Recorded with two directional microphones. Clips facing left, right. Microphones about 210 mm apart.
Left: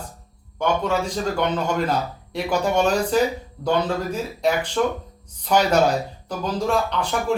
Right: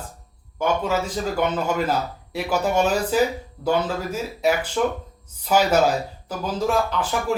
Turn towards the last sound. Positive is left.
turn(degrees=-5)  # may be behind; listen again after turning